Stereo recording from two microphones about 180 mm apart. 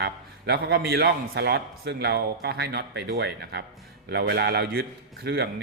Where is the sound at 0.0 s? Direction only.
65° right (ahead or behind).